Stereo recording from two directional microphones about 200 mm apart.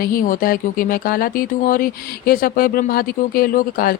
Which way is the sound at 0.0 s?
45° left (ahead or behind).